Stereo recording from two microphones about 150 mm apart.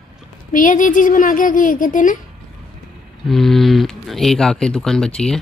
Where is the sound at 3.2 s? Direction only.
Centre (ahead or behind).